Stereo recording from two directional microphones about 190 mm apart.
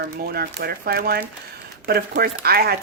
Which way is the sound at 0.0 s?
55° right (ahead or behind).